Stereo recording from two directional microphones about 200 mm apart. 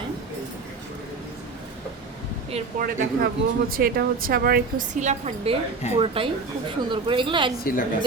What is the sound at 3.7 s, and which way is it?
Speech, 45° right (ahead or behind).